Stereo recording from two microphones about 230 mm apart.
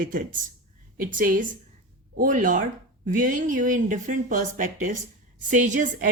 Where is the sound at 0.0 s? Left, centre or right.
Right.